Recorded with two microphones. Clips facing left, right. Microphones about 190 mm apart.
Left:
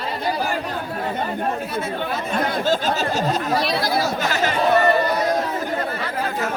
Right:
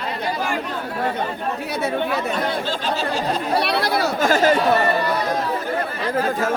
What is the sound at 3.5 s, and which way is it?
Speech, 65° right (ahead or behind).